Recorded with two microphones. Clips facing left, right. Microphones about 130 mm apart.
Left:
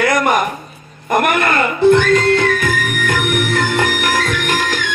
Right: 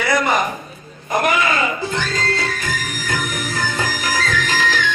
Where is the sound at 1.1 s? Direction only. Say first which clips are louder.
Left 3 dB; 60° left (ahead or behind).